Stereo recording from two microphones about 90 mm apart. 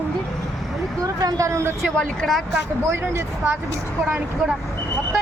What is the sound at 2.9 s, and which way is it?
Speech, 30° right (ahead or behind).